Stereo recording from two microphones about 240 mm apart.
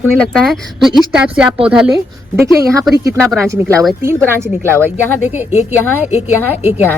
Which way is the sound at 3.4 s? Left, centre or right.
Centre.